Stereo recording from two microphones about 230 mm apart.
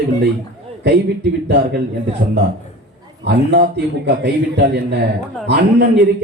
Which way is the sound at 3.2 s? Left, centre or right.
Right.